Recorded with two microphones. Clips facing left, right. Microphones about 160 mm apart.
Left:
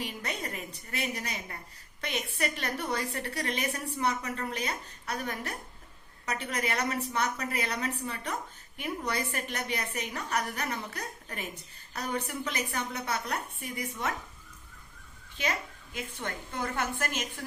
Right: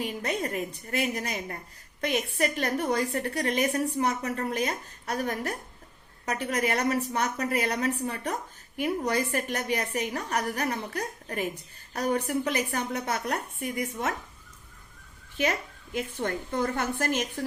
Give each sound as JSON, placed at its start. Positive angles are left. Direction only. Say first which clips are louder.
{"t": 0.0, "sound": "a woman's voice", "louder": "right 6 dB", "side_deg": -40}
{"t": 15.4, "sound": "a woman's voice", "louder": "right 3 dB", "side_deg": -50}